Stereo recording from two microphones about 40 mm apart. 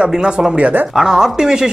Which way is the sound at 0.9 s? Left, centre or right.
Centre.